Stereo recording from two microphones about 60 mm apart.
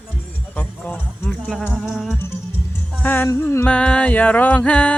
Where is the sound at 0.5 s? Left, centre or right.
Left.